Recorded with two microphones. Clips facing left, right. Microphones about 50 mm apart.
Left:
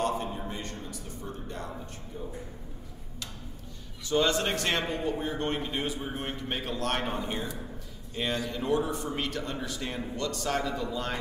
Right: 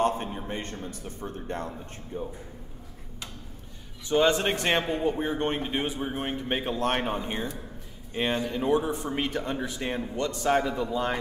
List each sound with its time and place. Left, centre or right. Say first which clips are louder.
0.0 s a sound: right 3 dB; right
2.1 s speech: right 6 dB; right
4.1 s speech: right 3 dB; right